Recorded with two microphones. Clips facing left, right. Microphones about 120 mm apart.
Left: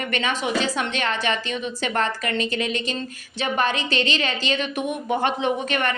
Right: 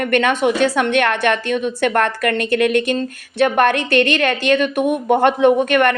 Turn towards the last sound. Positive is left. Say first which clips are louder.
# right 10 dB
turn(degrees=-60)  # may be behind; listen again after turning